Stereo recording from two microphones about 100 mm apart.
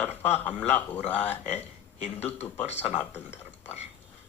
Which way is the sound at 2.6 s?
90° left.